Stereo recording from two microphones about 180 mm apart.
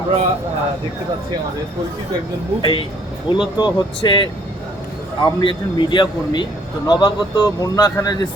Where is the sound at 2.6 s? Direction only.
25° left (ahead or behind).